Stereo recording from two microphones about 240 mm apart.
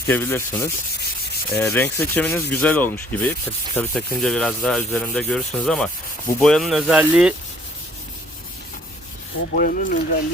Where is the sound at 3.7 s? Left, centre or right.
Centre.